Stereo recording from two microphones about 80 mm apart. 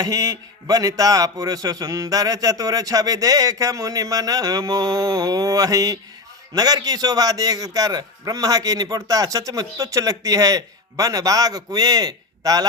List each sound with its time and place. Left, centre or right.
0.0 s a man's voice: right